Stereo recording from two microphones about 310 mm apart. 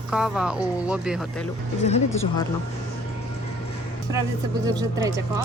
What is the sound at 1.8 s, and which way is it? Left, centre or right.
Speech, left.